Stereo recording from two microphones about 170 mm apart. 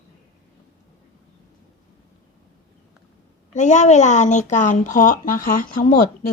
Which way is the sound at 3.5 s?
45° left (ahead or behind).